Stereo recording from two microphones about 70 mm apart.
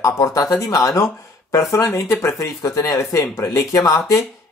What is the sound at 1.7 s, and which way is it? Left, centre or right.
Speech, left.